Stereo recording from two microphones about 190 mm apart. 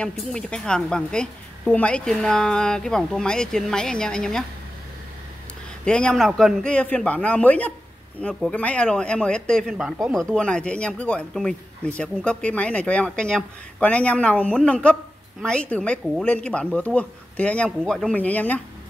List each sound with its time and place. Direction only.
0.0 s speech: 5° left (ahead or behind)
5.9 s speech: 5° left (ahead or behind)